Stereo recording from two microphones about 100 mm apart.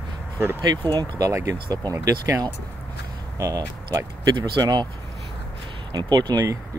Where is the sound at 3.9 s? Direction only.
45° right (ahead or behind).